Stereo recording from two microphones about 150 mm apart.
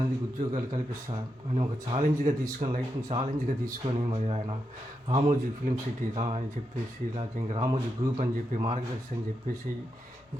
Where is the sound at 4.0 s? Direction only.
45° right (ahead or behind).